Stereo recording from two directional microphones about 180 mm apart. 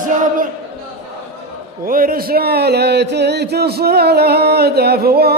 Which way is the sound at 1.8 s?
50° right (ahead or behind).